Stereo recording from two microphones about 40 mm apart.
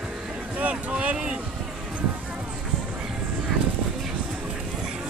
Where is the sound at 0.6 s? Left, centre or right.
Right.